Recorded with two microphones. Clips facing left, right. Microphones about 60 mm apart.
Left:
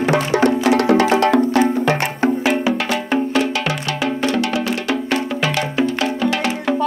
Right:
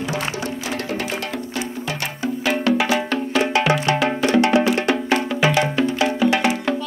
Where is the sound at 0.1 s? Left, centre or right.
Left.